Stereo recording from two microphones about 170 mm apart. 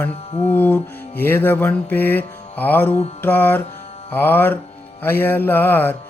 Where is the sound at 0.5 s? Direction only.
10° left (ahead or behind).